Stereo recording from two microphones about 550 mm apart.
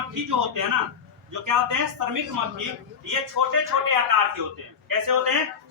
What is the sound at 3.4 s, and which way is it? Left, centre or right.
Speech, right.